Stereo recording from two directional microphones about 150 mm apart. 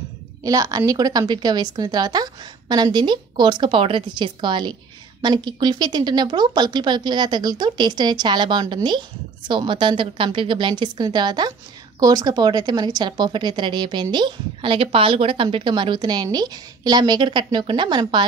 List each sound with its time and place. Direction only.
0.4 s a woman's voice: 25° right (ahead or behind)